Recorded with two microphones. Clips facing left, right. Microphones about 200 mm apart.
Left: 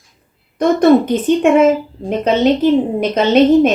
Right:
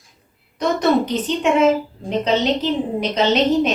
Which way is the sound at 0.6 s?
50° left (ahead or behind).